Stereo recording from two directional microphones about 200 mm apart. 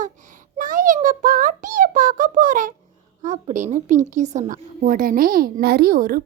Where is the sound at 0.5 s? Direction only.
40° right (ahead or behind).